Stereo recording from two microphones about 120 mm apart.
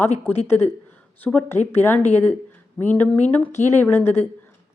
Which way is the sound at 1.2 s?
15° left (ahead or behind).